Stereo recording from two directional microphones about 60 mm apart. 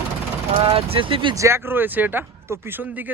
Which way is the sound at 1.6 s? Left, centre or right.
Right.